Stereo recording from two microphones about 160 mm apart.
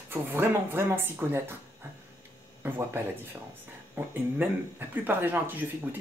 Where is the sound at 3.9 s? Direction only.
15° right (ahead or behind).